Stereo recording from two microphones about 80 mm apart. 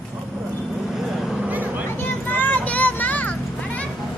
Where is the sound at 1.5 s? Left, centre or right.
Right.